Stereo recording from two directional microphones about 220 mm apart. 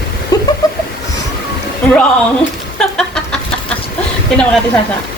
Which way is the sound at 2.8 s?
5° left (ahead or behind).